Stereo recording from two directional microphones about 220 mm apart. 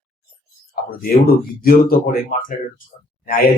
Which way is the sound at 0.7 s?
45° left (ahead or behind).